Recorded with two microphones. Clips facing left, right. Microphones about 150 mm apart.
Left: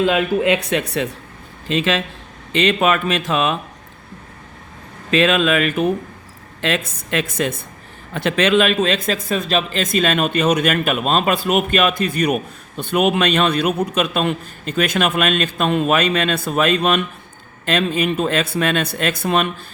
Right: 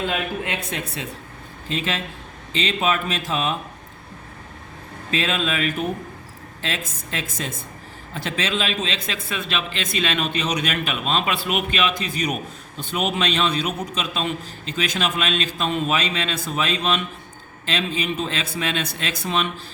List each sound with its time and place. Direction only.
0.0 s speech: 90° left; by 3.6 s 70° left (ahead or behind)
5.1 s a man's voice: 70° left (ahead or behind); by 19.5 s 55° left (ahead or behind)